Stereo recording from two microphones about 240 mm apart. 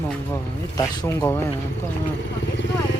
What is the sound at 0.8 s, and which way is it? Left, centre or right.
Speech, centre.